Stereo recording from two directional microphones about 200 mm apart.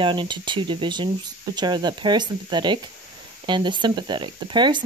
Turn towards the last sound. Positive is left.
turn(degrees=-25)  # may be behind; listen again after turning